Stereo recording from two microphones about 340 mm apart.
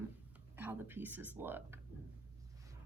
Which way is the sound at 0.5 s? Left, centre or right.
Centre.